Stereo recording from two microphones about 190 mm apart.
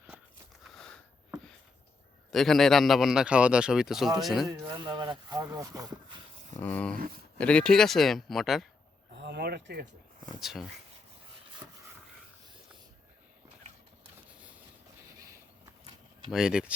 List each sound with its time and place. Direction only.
0.6 s a sound: centre (ahead or behind)
2.3 s a man's voice: centre (ahead or behind)
4.4 s speech: 20° right (ahead or behind)
6.6 s a man's voice: 10° left (ahead or behind)
9.1 s speech: 65° right (ahead or behind)
10.4 s a man's voice: centre (ahead or behind)
15.2 s a sound: 15° right (ahead or behind)
16.3 s a man's voice: 5° right (ahead or behind)